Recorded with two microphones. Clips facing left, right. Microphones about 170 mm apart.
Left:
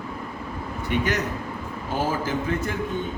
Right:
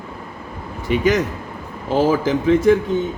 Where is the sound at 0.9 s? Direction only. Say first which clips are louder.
Right 8 dB; 90° right.